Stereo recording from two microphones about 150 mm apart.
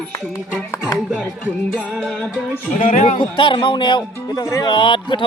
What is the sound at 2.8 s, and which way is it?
Speech, 55° left (ahead or behind).